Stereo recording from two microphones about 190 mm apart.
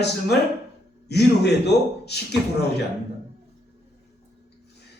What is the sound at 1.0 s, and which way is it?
A man's voice, 60° left (ahead or behind).